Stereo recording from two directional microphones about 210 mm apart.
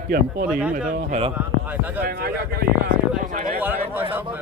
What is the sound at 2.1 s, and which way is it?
Speech, 45° right (ahead or behind).